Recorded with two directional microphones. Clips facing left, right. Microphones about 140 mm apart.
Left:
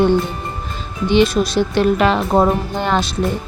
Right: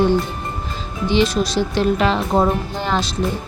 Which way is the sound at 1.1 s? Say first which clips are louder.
Left 3 dB; 55° left (ahead or behind).